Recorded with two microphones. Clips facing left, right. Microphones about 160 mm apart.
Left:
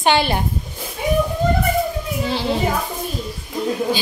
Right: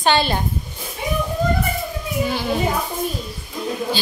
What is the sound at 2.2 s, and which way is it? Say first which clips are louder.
Speech: left 2 dB; 25° left (ahead or behind).